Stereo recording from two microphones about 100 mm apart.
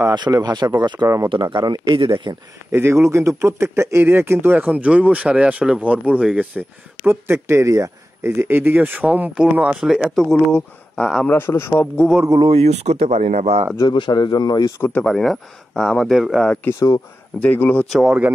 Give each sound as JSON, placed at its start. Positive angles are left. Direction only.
{"t": 0.1, "sound": "speech", "side_deg": -45}
{"t": 1.0, "sound": "speech", "side_deg": -30}
{"t": 1.3, "sound": "speech", "side_deg": -50}
{"t": 2.0, "sound": "speech", "side_deg": -55}
{"t": 2.7, "sound": "speech", "side_deg": -25}
{"t": 7.1, "sound": "speech", "side_deg": -25}
{"t": 11.2, "sound": "a man's voice", "side_deg": 25}
{"t": 12.4, "sound": "speech", "side_deg": -80}
{"t": 13.7, "sound": "speech", "side_deg": 50}
{"t": 14.8, "sound": "speech", "side_deg": 15}
{"t": 15.1, "sound": "speech", "side_deg": 0}
{"t": 17.4, "sound": "speech", "side_deg": 15}
{"t": 17.8, "sound": "speech", "side_deg": 0}